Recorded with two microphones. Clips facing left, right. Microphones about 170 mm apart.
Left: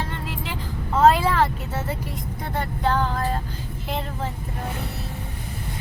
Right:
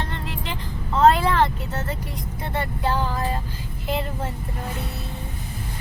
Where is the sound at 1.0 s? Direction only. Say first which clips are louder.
Even; 5° left (ahead or behind).